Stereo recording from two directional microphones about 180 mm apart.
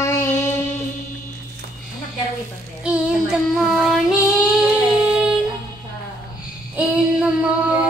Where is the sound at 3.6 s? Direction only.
Centre (ahead or behind).